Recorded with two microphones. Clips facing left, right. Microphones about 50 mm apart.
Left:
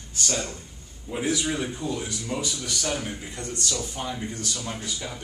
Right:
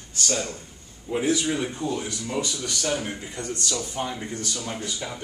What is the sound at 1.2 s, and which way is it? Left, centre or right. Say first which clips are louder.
Speech: right 1 dB; centre.